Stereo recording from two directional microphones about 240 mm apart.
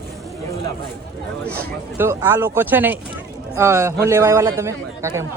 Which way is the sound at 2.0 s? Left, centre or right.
Centre.